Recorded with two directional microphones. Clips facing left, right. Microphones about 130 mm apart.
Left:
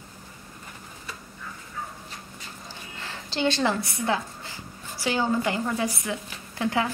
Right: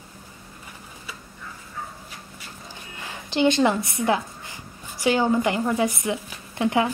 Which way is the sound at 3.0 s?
15° right (ahead or behind).